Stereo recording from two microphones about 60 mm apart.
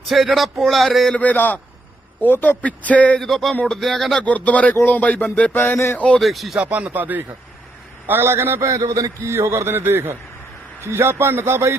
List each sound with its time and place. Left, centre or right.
0.1 s speech: centre
1.1 s speech: left
3.2 s speech: centre
4.2 s speech: left
5.7 s speech: left
6.1 s speech: centre
6.6 s speech: right
8.0 s a man's voice: right
8.6 s a man's voice: right